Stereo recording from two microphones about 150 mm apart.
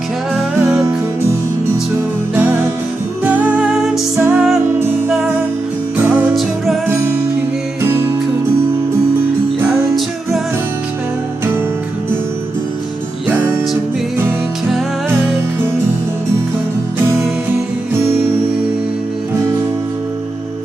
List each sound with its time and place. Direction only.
3.2 s music: 15° right (ahead or behind)
3.8 s music: centre (ahead or behind)
4.2 s music: 15° right (ahead or behind)
6.8 s music: 15° right (ahead or behind)